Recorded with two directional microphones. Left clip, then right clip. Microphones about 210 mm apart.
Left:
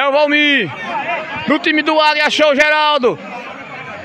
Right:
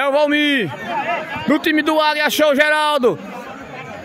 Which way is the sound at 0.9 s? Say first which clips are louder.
Left 1 dB; 35° right (ahead or behind).